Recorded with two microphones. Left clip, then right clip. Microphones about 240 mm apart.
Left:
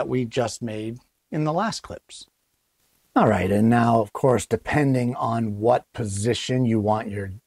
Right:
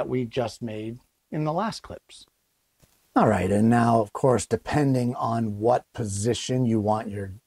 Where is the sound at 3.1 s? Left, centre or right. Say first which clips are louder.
Left 2 dB; centre.